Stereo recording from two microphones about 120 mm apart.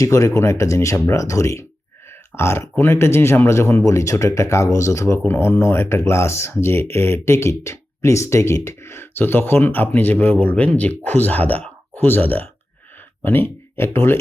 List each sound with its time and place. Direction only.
0.0 s speech: 25° left (ahead or behind)